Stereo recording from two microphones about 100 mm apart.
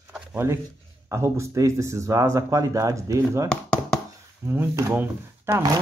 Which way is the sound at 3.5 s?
10° left (ahead or behind).